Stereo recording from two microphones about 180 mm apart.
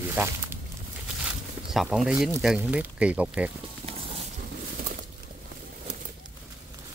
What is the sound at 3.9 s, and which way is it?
Music, 35° right (ahead or behind).